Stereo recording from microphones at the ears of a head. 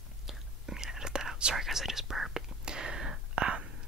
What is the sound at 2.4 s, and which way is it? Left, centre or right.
Whispering, right.